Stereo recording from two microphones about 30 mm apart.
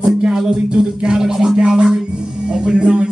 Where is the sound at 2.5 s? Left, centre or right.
Right.